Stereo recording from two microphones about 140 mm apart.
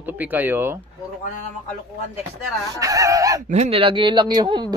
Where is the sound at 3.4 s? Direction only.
55° right (ahead or behind).